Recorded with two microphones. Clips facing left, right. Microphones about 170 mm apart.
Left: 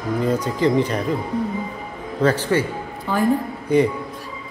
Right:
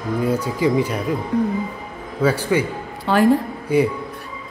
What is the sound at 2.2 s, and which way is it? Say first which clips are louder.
Speech: even; 10° right (ahead or behind).